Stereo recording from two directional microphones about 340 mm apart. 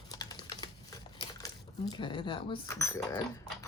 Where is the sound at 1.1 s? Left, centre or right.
Centre.